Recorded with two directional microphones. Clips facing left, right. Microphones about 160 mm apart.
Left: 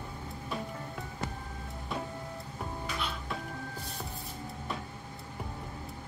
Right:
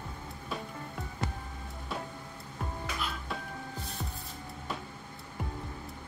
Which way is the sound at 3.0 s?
Centre (ahead or behind).